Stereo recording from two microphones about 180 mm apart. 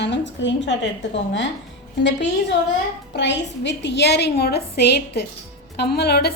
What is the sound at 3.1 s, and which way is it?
A woman's voice, 75° left (ahead or behind).